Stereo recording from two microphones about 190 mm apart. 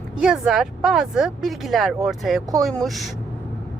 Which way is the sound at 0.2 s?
5° right (ahead or behind).